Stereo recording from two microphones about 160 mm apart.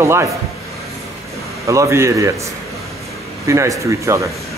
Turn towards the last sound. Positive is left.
turn(degrees=-20)  # may be behind; listen again after turning